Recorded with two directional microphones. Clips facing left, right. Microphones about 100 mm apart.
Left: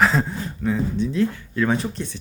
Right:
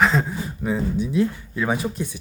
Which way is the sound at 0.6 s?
15° right (ahead or behind).